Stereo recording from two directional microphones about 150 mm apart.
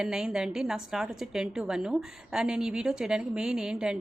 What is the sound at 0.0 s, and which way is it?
A woman's voice, 5° right (ahead or behind).